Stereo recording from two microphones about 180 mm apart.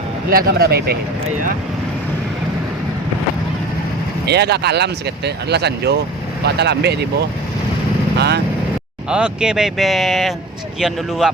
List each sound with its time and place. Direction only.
0.3 s speech: 55° right (ahead or behind)
4.3 s speech: 65° right (ahead or behind)
9.0 s speech: 5° right (ahead or behind)